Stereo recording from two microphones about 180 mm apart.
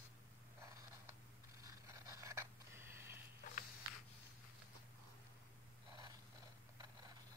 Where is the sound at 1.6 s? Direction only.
15° right (ahead or behind).